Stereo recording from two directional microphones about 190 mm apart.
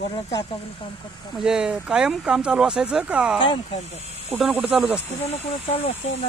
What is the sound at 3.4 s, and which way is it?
Speech, 25° left (ahead or behind).